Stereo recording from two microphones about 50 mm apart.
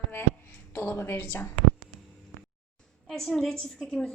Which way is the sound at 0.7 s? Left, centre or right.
Left.